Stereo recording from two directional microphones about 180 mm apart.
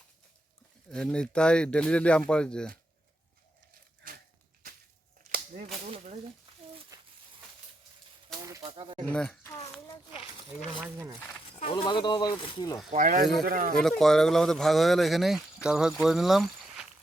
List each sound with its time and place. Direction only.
0.9 s speech: 5° left (ahead or behind)
8.4 s speech: 20° right (ahead or behind)
9.0 s speech: 5° left (ahead or behind)
9.5 s a sound: 15° left (ahead or behind)
10.9 s speech: 15° right (ahead or behind)
11.5 s speech: 35° left (ahead or behind)
12.9 s speech: 50° right (ahead or behind)
13.7 s speech: 5° left (ahead or behind)